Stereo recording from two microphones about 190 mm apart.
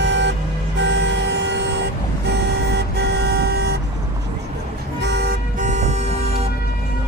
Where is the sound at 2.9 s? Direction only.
60° right (ahead or behind).